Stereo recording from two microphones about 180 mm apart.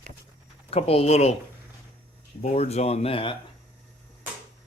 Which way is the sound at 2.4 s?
40° left (ahead or behind).